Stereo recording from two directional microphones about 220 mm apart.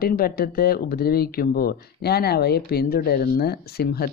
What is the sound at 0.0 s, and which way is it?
A woman's voice, 45° left (ahead or behind).